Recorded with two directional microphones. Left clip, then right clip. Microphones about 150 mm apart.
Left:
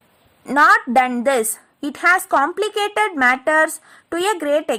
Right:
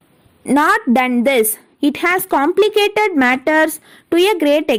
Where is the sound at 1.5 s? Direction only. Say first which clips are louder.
Right 10 dB; 20° right (ahead or behind).